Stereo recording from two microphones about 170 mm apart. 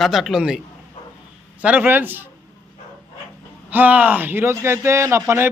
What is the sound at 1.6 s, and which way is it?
Speech, 10° right (ahead or behind).